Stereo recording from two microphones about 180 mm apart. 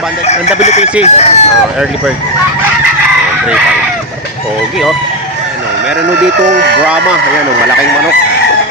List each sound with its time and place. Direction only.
0.3 s speech: 40° left (ahead or behind)